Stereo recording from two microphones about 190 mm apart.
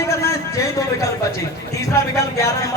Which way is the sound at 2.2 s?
15° left (ahead or behind).